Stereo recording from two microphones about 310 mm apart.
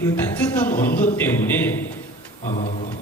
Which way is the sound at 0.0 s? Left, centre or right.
Centre.